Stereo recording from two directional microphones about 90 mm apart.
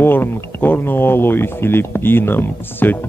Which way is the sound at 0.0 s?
25° left (ahead or behind).